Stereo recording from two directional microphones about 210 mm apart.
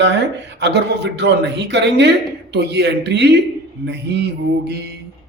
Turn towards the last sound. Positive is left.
turn(degrees=-50)  # may be behind; listen again after turning